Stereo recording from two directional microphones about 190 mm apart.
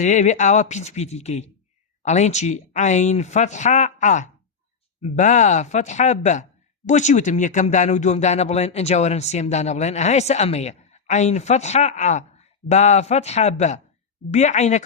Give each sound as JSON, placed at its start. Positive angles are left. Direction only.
{"t": 0.0, "sound": "speech", "side_deg": 40}